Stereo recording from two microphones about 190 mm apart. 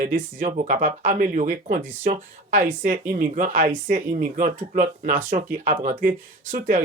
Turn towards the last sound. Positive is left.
turn(degrees=-45)  # may be behind; listen again after turning